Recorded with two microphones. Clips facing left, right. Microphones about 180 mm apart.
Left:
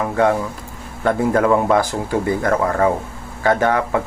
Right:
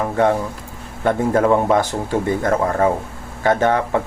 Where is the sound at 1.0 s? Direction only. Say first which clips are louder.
Even; 25° right (ahead or behind).